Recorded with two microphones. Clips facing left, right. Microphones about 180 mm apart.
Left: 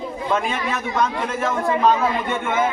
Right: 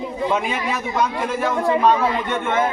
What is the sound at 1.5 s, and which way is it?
Speech, 20° right (ahead or behind).